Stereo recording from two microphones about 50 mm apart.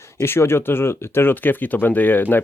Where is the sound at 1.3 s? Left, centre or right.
Left.